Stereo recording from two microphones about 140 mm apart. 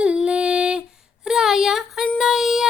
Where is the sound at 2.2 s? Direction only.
Centre (ahead or behind).